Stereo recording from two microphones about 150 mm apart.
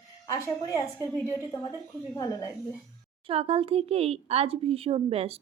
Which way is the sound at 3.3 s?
40° right (ahead or behind).